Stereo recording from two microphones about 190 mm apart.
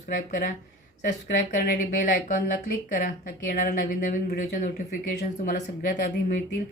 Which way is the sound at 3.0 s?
45° left (ahead or behind).